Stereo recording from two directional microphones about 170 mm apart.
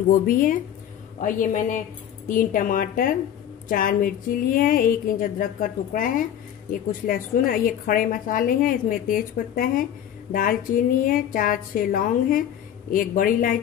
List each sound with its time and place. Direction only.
0.1 s a woman's voice: 55° left (ahead or behind)